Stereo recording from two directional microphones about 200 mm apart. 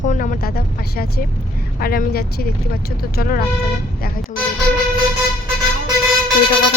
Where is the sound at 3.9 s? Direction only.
45° left (ahead or behind).